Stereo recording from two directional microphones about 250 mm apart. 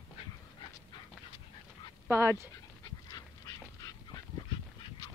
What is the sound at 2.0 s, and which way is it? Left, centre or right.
Speech, centre.